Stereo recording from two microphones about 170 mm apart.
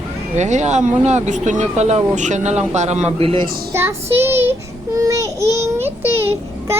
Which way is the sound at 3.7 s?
15° right (ahead or behind).